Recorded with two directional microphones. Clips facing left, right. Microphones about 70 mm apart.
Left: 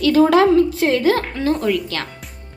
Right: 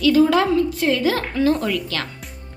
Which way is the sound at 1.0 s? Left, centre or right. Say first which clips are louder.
Left 1 dB; left.